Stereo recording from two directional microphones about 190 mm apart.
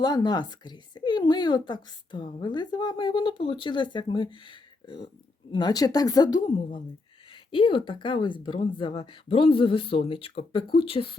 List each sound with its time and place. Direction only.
0.0 s speech: 20° left (ahead or behind)